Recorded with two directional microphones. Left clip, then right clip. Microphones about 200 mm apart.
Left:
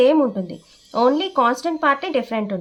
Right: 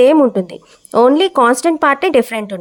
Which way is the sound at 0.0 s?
50° right (ahead or behind).